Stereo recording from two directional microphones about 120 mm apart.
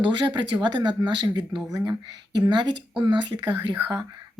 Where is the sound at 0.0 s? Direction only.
45° right (ahead or behind).